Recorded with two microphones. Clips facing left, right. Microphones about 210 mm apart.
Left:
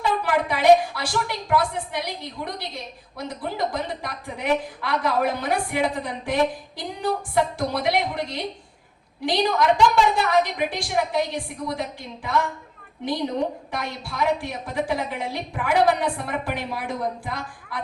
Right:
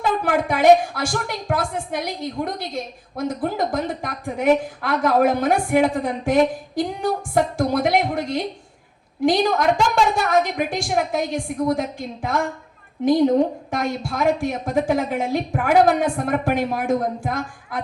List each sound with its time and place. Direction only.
0.1 s a woman's voice: 50° right (ahead or behind)